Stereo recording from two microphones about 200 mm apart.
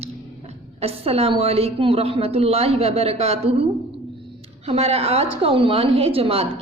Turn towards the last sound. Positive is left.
turn(degrees=-30)  # may be behind; listen again after turning